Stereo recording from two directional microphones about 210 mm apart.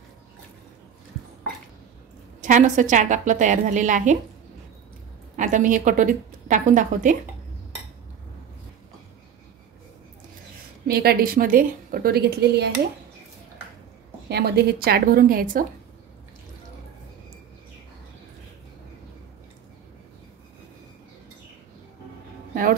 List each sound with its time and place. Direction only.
2.4 s a woman's voice: 35° right (ahead or behind)
5.3 s a woman's voice: 40° right (ahead or behind)
10.9 s a woman's voice: 45° right (ahead or behind)
14.3 s a woman's voice: 50° right (ahead or behind)
22.5 s a sound: 40° right (ahead or behind)